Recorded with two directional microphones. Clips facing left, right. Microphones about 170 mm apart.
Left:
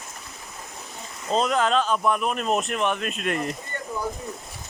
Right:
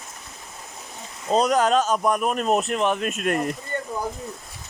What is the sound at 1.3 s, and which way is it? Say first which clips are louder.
Speech: right 3 dB; 40° right (ahead or behind).